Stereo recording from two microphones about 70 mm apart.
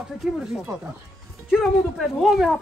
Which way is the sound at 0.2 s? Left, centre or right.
Centre.